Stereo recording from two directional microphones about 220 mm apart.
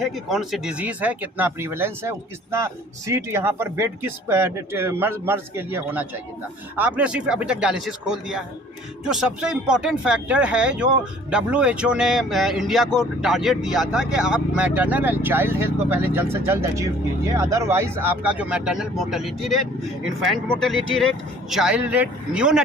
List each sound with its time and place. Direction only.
0.0 s speech: centre (ahead or behind)